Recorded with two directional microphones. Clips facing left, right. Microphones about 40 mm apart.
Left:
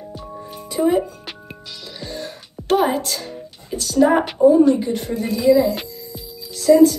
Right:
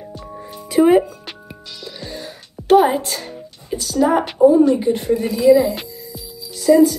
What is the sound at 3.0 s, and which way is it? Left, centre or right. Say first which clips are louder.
Music: even; right.